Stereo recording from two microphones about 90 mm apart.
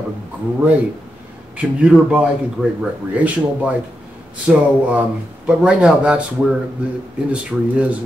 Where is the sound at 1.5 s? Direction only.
15° right (ahead or behind).